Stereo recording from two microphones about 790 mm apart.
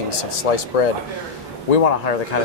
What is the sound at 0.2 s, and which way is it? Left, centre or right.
Speech, left.